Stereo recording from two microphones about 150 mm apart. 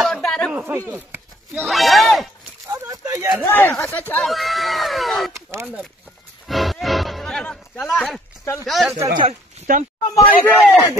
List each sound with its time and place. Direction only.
0.0 s a sound: 5° left (ahead or behind)
0.5 s a sound: 10° right (ahead or behind)
1.7 s speech: centre (ahead or behind)
2.7 s a sound: 20° right (ahead or behind)
3.4 s speech: 15° left (ahead or behind)
4.1 s speech: centre (ahead or behind)
5.3 s speech: 15° right (ahead or behind)
6.4 s music: centre (ahead or behind)
8.6 s speech: centre (ahead or behind)
9.7 s speech: 65° right (ahead or behind)
10.1 s speech: 10° left (ahead or behind)
10.6 s speech: 10° right (ahead or behind)